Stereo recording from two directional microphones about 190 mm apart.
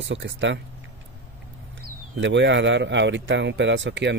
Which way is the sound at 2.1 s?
70° right (ahead or behind).